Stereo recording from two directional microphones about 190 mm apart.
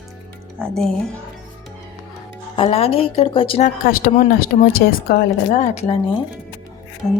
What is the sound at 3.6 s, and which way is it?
Speech, 50° left (ahead or behind).